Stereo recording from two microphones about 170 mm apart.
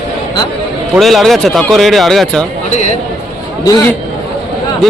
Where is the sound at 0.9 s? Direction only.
Centre (ahead or behind).